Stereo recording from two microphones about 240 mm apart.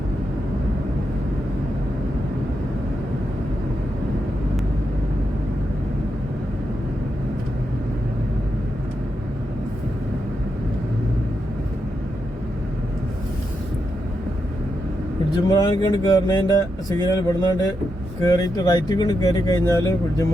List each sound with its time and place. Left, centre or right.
15.4 s speech: centre